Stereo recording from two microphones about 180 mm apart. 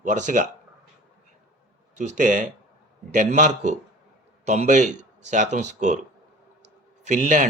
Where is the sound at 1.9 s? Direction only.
40° right (ahead or behind).